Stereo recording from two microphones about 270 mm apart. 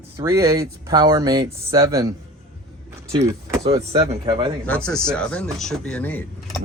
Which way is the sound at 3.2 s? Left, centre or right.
Centre.